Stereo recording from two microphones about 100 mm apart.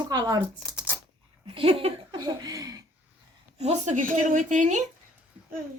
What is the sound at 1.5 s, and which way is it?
Speech, 65° right (ahead or behind).